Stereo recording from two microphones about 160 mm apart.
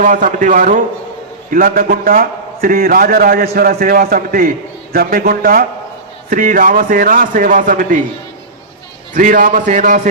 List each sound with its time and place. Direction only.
0.0 s a man's voice: 50° right (ahead or behind)
9.1 s a man's voice: 55° right (ahead or behind)